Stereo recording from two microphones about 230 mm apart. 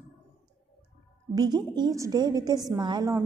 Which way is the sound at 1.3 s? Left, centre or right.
Centre.